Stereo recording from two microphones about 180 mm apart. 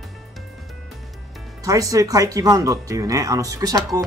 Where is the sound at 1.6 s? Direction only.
20° right (ahead or behind).